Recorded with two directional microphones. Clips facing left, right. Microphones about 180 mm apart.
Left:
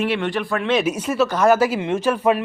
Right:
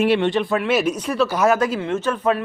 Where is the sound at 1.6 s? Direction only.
10° left (ahead or behind).